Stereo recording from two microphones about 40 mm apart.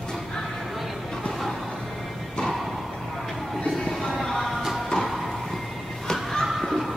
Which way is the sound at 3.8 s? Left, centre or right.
Centre.